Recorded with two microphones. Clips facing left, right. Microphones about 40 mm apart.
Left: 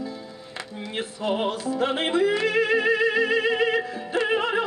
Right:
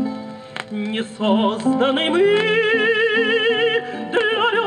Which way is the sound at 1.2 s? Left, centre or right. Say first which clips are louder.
Right 8 dB; right.